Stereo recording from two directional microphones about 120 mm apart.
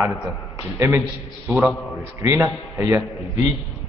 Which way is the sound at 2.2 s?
25° right (ahead or behind).